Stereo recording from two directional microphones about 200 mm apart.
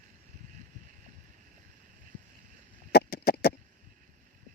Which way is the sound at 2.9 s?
50° left (ahead or behind).